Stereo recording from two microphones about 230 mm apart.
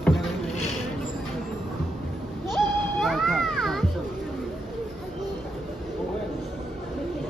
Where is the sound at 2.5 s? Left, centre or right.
Centre.